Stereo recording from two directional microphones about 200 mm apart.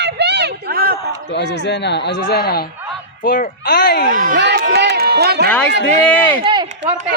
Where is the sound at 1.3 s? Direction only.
60° left (ahead or behind).